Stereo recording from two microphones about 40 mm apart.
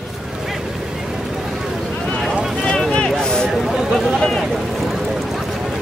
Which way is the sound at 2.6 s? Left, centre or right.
Centre.